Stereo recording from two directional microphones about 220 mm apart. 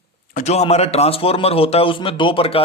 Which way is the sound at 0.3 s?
30° left (ahead or behind).